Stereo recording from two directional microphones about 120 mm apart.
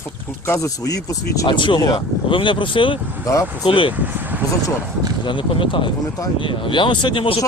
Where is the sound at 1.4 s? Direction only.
45° left (ahead or behind).